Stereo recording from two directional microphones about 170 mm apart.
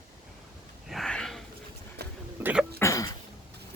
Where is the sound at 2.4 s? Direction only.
10° right (ahead or behind).